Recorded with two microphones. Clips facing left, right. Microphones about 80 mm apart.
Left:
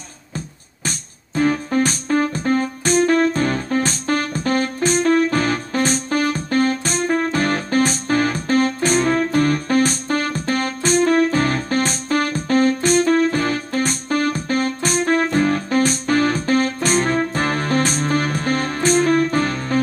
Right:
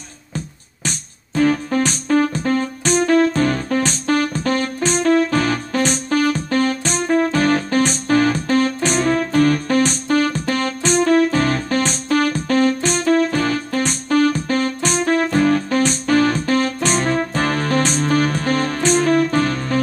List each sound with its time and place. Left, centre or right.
0.8 s keyboard: left
4.3 s music: left
4.9 s keyboard: left
15.4 s music: left
17.0 s keyboard: left
18.0 s music: left